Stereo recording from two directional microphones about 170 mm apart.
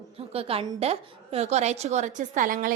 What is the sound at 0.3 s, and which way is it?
A woman's voice, 35° right (ahead or behind).